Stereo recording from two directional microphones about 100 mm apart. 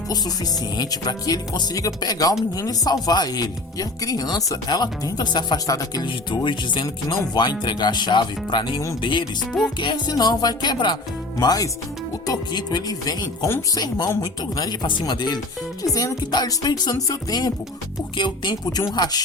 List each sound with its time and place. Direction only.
0.8 s speech: 40° left (ahead or behind)
5.6 s speech: 35° left (ahead or behind)
6.3 s speech: 50° left (ahead or behind)
9.5 s music: 5° left (ahead or behind)
9.8 s speech: 45° left (ahead or behind)
18.2 s speech: 50° left (ahead or behind)